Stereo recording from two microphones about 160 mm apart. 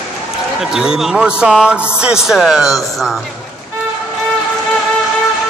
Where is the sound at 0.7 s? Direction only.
5° right (ahead or behind).